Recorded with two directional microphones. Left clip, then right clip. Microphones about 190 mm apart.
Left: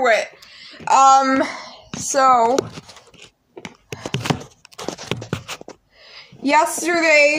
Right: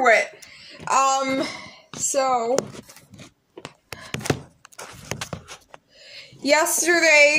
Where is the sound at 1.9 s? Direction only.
10° left (ahead or behind).